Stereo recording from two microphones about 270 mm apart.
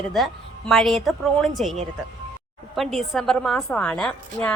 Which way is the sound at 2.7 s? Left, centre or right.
Centre.